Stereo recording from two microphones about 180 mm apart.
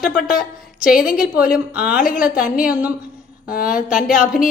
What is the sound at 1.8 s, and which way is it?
Speech, 10° right (ahead or behind).